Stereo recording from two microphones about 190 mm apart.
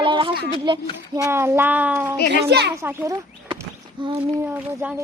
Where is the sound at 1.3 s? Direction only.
15° right (ahead or behind).